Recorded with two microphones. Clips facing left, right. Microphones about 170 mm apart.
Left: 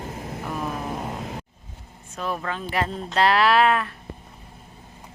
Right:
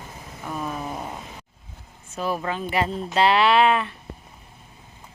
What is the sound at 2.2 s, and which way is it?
Speech, 5° right (ahead or behind).